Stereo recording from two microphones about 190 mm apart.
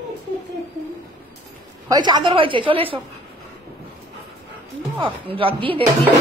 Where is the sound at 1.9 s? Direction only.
20° right (ahead or behind).